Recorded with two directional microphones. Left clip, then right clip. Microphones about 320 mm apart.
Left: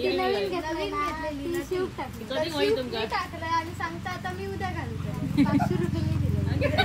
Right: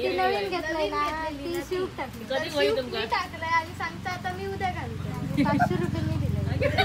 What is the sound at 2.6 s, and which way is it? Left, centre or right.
A child's voice, centre.